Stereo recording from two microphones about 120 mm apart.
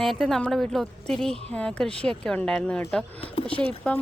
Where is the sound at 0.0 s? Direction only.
Centre (ahead or behind).